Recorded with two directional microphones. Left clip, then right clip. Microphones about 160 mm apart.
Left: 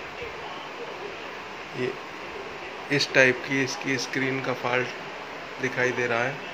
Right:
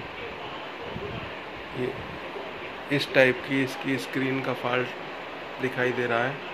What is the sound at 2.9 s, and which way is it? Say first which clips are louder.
Speech: left 1 dB; 5° right (ahead or behind).